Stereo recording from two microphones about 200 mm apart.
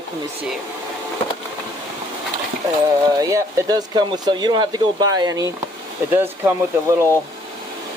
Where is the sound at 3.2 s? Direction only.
15° right (ahead or behind).